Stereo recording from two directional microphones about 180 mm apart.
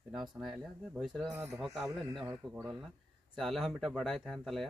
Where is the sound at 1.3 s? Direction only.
15° right (ahead or behind).